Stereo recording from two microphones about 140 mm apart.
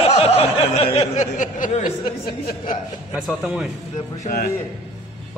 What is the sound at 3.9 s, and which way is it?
Speech, 55° left (ahead or behind).